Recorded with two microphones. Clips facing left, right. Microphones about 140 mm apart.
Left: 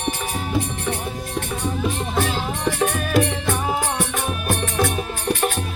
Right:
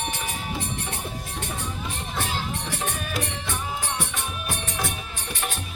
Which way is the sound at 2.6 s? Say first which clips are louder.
Left 9 dB; 75° left (ahead or behind).